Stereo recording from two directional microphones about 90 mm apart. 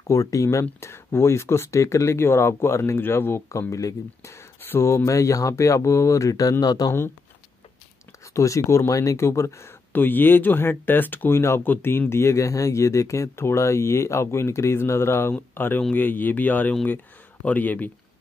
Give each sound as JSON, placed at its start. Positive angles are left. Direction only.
{"t": 0.0, "sound": "speech", "side_deg": 35}
{"t": 8.3, "sound": "speech", "side_deg": 35}